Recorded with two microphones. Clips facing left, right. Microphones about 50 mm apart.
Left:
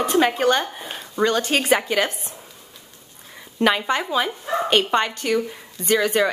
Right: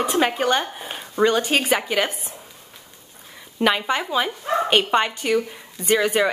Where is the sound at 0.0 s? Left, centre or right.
Centre.